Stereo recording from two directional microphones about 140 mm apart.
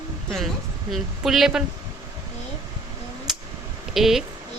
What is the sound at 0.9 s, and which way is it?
Speech, centre (ahead or behind).